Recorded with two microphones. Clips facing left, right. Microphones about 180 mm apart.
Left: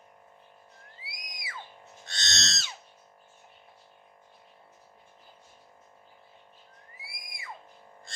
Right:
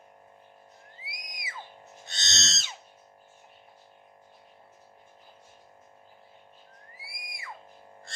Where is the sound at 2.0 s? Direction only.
20° right (ahead or behind).